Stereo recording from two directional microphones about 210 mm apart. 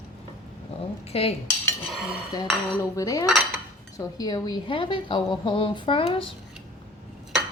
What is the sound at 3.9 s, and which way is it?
A woman's voice, 15° left (ahead or behind).